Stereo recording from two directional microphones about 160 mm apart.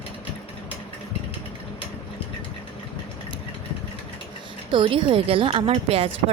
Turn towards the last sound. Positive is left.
turn(degrees=-40)  # may be behind; listen again after turning